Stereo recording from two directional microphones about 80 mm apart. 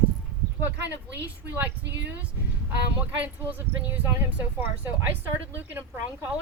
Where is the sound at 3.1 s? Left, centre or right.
Right.